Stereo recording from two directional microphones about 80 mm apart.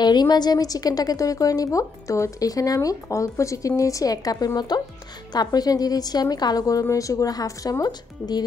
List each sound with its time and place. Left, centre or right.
0.0 s a woman's voice: left